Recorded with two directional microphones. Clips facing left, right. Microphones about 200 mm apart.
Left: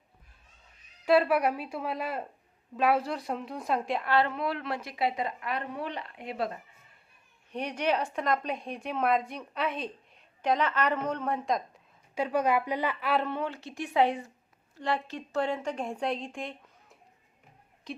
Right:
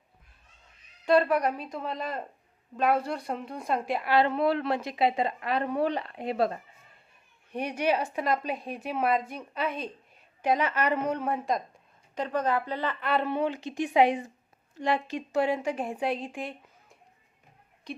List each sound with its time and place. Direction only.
1.0 s speech: 5° left (ahead or behind)
4.3 s a woman's voice: 30° right (ahead or behind)
7.5 s a woman's voice: 10° right (ahead or behind)
12.1 s speech: 10° left (ahead or behind)
13.2 s a woman's voice: 15° right (ahead or behind); by 18.0 s centre (ahead or behind)